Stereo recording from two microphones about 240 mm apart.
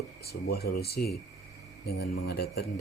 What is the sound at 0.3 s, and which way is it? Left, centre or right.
Speech, left.